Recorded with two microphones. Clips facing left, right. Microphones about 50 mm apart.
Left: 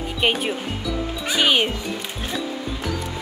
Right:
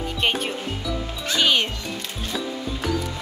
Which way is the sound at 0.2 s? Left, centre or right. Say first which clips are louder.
Left 3 dB; centre.